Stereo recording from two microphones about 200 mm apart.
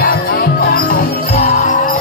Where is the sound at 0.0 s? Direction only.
50° left (ahead or behind).